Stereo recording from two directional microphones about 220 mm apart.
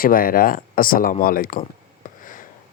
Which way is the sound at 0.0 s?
40° left (ahead or behind).